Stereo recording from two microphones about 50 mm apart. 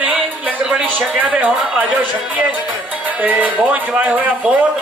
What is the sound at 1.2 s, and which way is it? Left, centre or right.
Speech, right.